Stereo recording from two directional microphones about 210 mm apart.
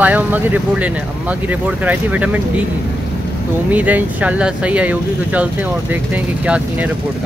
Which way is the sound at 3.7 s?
5° right (ahead or behind).